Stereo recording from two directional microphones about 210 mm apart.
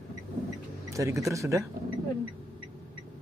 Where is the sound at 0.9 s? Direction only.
15° right (ahead or behind).